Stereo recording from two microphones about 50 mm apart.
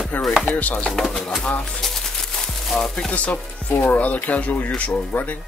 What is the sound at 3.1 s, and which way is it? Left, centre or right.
Chopping, left.